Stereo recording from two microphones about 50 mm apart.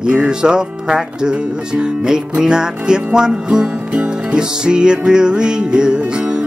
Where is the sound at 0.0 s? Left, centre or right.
Right.